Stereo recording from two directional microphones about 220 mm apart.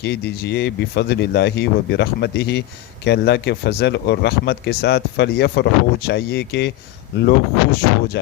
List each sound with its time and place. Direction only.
0.0 s speech: 50° left (ahead or behind)